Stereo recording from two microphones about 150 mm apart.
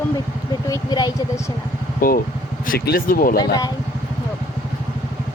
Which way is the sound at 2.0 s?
70° left (ahead or behind).